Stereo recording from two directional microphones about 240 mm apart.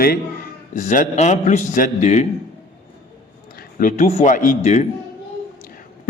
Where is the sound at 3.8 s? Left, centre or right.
Left.